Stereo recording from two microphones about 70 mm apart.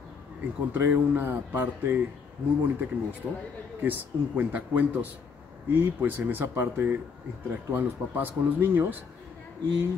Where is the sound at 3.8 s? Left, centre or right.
Right.